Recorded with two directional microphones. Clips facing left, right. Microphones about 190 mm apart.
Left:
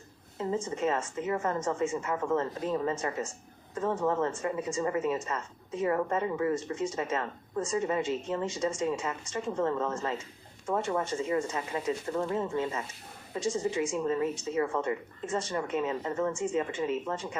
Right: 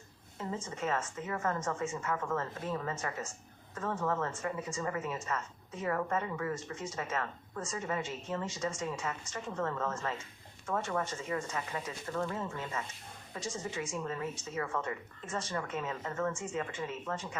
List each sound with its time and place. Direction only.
0.3 s speech: 25° left (ahead or behind)